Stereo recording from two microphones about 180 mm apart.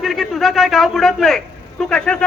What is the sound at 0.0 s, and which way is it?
A man's voice, centre (ahead or behind).